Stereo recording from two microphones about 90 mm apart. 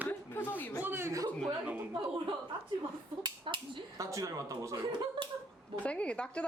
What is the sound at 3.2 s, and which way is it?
Speech, 65° right (ahead or behind).